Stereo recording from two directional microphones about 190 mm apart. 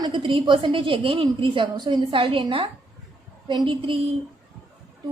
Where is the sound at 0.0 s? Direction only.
25° right (ahead or behind).